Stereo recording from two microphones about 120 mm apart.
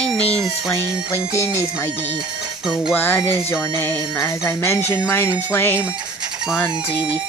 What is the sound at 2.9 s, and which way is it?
Speech, 20° left (ahead or behind).